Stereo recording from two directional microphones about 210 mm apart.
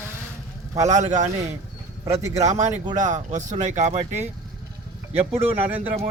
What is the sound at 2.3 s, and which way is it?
Speech, 35° right (ahead or behind).